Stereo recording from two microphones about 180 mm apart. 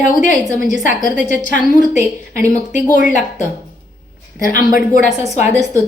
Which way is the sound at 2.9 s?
45° left (ahead or behind).